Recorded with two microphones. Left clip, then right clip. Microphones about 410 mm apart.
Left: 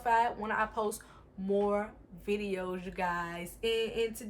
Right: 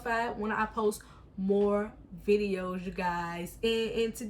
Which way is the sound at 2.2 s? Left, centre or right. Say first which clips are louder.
Right 6 dB; centre.